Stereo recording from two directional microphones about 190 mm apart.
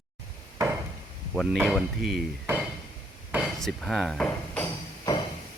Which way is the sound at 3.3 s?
5° right (ahead or behind).